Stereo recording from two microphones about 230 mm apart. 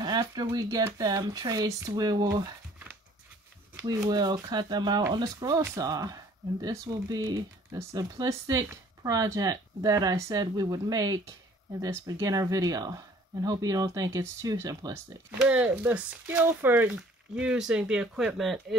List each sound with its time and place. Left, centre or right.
0.0 s speech: centre
3.8 s speech: centre